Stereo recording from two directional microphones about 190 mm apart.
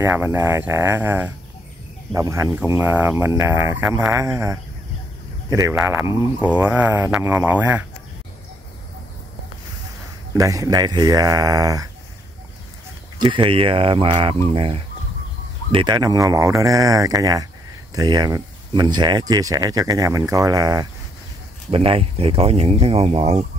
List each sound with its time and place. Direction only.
0.0 s speech: 10° right (ahead or behind)
10.3 s speech: 15° right (ahead or behind)
13.2 s speech: 25° right (ahead or behind)
21.6 s speech: 30° right (ahead or behind)